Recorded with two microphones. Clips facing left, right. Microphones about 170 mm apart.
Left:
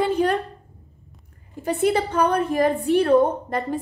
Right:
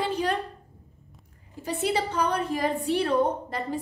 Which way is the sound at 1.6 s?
55° left (ahead or behind).